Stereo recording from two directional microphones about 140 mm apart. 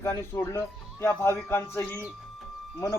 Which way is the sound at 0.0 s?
20° left (ahead or behind).